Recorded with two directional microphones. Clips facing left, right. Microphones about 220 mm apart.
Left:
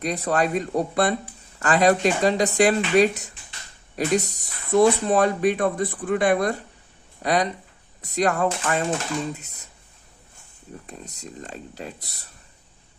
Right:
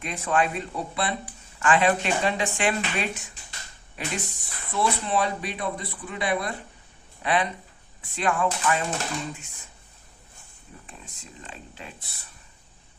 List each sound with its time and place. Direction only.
0.0 s speech: 40° left (ahead or behind)
10.8 s speech: 40° left (ahead or behind)